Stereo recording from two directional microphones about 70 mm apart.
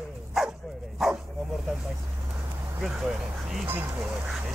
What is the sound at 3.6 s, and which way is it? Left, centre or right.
Speech, right.